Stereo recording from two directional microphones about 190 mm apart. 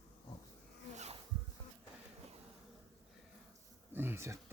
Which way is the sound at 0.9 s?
35° right (ahead or behind).